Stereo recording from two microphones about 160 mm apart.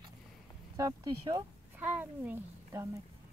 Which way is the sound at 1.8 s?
10° right (ahead or behind).